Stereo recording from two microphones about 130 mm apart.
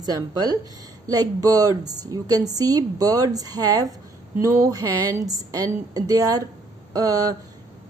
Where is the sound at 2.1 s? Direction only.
30° right (ahead or behind).